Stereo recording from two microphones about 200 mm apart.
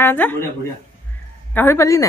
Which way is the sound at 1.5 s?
10° left (ahead or behind).